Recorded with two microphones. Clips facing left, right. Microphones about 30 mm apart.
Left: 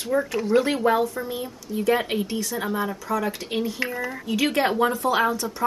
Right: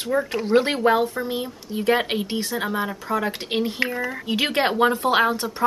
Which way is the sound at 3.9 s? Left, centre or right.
Right.